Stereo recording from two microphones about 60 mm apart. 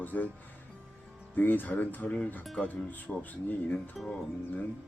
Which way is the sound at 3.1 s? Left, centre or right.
Centre.